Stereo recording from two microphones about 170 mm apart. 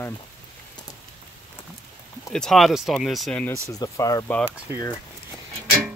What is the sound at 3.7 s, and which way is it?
Speech, 20° left (ahead or behind).